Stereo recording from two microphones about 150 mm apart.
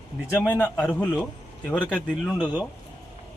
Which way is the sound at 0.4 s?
10° left (ahead or behind).